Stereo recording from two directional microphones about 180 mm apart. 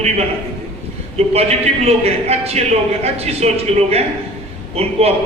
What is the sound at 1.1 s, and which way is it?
A man's voice, 35° right (ahead or behind).